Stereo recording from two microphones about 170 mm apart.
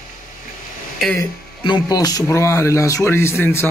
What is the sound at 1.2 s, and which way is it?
Speech, 25° left (ahead or behind).